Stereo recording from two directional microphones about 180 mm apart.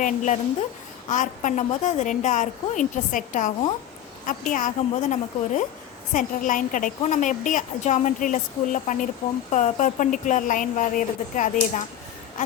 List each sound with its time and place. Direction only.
0.0 s a woman's voice: 45° left (ahead or behind)